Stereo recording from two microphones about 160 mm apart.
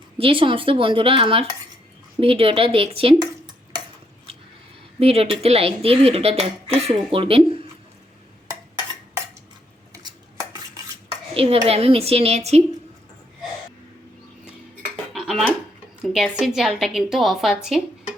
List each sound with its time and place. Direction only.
0.2 s speech: 35° right (ahead or behind)
4.9 s speech: 40° right (ahead or behind)
9.9 s cutlery: 25° right (ahead or behind)
11.3 s speech: 40° right (ahead or behind)
15.1 s dishes: centre (ahead or behind)
16.0 s a woman's voice: centre (ahead or behind)